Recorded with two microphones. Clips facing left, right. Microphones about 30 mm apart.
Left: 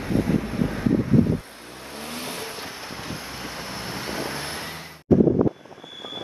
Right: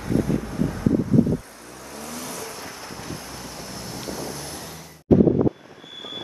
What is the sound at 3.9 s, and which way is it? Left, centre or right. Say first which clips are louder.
Vehicle: left 2 dB; left.